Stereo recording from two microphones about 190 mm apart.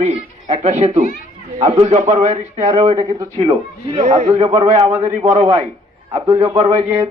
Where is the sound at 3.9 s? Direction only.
35° right (ahead or behind).